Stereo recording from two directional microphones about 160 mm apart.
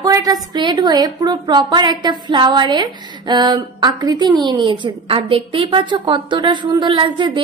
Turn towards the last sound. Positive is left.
turn(degrees=-30)  # may be behind; listen again after turning